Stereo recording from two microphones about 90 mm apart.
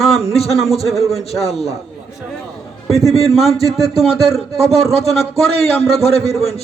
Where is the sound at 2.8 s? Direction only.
Centre (ahead or behind).